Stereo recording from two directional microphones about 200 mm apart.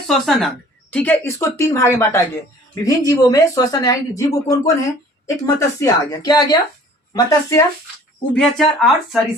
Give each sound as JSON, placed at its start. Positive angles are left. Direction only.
{"t": 0.1, "sound": "a woman's voice", "side_deg": 0}
{"t": 8.3, "sound": "speech", "side_deg": 0}